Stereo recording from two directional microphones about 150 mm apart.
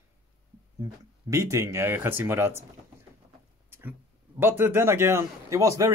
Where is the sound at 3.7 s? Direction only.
15° right (ahead or behind).